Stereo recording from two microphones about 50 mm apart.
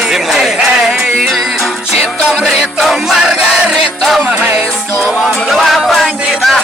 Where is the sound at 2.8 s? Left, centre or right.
Centre.